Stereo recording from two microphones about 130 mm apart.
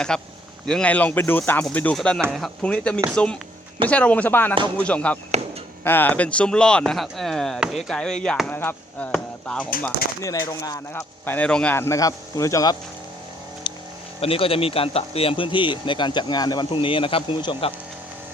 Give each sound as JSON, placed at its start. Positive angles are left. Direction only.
{"t": 0.1, "sound": "speech", "side_deg": 5}
{"t": 9.1, "sound": "chop", "side_deg": 5}
{"t": 10.2, "sound": "speech", "side_deg": 25}
{"t": 11.3, "sound": "speech", "side_deg": 10}
{"t": 13.7, "sound": "vehicle", "side_deg": 40}
{"t": 14.2, "sound": "speech", "side_deg": 45}